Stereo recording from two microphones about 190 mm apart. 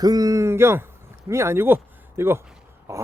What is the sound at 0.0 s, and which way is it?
Speech, 20° right (ahead or behind).